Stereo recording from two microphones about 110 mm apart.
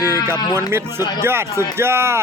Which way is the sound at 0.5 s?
20° right (ahead or behind).